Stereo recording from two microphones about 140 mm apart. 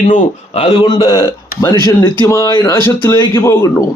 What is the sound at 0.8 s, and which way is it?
Speech, 30° left (ahead or behind).